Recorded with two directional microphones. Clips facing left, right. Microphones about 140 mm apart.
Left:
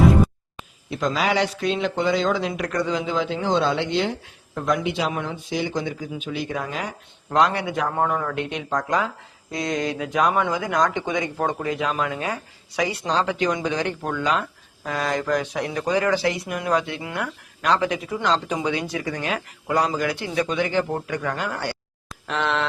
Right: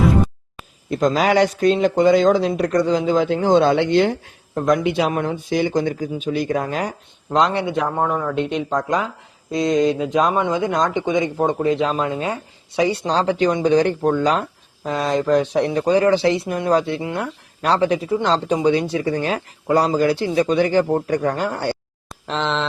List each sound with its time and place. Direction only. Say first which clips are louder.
0.9 s speech: right 6 dB; 40° right (ahead or behind)
4.8 s speech: right 6 dB; 60° right (ahead or behind); by 6.9 s 45° right (ahead or behind)
7.3 s speech: right 2 dB; 25° right (ahead or behind)
7.9 s a man's voice: right 2 dB; 5° right (ahead or behind)
8.9 s speech: right 2 dB; 20° right (ahead or behind)
14.8 s speech: right 5 dB; 25° right (ahead or behind)